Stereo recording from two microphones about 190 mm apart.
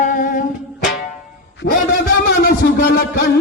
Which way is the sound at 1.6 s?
55° left (ahead or behind).